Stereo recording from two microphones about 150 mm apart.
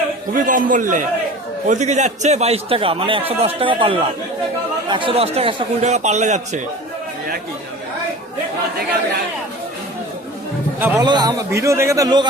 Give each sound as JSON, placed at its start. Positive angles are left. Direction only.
{"t": 0.4, "sound": "a man's voice", "side_deg": -60}
{"t": 5.8, "sound": "a man's voice", "side_deg": -50}
{"t": 10.8, "sound": "a man's voice", "side_deg": -10}
{"t": 11.0, "sound": "a man's voice", "side_deg": -30}